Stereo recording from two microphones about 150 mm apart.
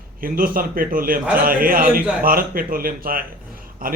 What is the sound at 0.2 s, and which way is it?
Speech, 70° right (ahead or behind).